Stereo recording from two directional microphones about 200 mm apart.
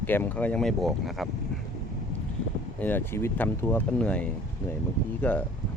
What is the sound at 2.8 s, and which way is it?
Speech, 10° left (ahead or behind).